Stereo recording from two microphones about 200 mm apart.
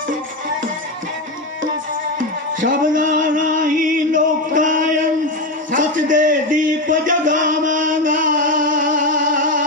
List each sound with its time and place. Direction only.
2.1 s music: 40° right (ahead or behind)
4.1 s chant: 40° right (ahead or behind)
5.7 s a sound: 40° right (ahead or behind)